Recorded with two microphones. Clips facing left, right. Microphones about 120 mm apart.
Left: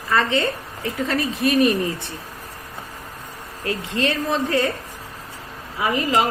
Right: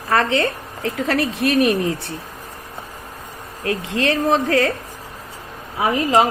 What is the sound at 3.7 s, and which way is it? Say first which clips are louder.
A woman's voice: right 3 dB; 90° right.